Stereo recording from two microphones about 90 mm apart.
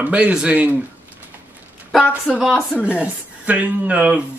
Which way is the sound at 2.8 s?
15° right (ahead or behind).